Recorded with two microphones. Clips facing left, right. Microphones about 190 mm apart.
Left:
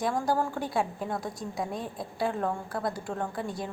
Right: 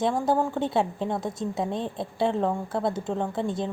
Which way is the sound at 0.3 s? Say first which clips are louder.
Right 4 dB; 20° right (ahead or behind).